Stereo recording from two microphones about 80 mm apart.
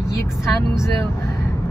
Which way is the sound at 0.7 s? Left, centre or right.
Left.